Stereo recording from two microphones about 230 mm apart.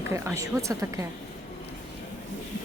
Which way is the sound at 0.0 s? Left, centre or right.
Centre.